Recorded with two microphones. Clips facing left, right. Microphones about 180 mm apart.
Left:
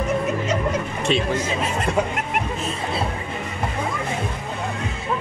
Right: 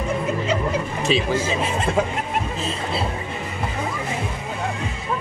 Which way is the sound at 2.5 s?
30° right (ahead or behind).